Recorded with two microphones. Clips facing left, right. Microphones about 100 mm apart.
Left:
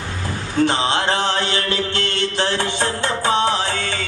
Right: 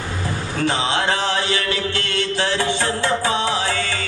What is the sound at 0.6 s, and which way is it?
Speech, 25° left (ahead or behind).